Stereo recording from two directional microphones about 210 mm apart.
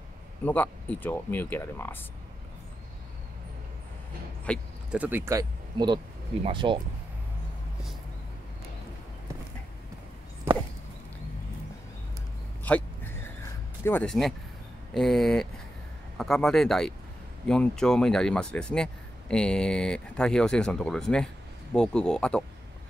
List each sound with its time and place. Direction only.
0.5 s speech: 10° left (ahead or behind)
4.5 s speech: 5° left (ahead or behind)
4.9 s speech: 10° right (ahead or behind); by 6.8 s 25° right (ahead or behind)
12.6 s a sound: 10° left (ahead or behind)
13.8 s speech: 5° left (ahead or behind)